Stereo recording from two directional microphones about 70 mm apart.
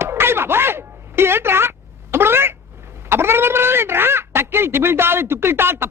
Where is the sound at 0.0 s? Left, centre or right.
Right.